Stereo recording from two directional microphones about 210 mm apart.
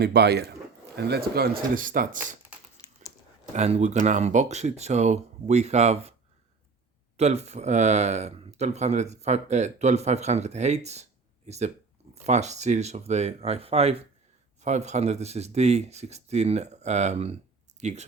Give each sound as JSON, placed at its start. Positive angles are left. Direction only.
{"t": 0.0, "sound": "speech", "side_deg": -50}
{"t": 2.8, "sound": "crumpling", "side_deg": 20}
{"t": 3.5, "sound": "speech", "side_deg": -30}
{"t": 7.2, "sound": "speech", "side_deg": -30}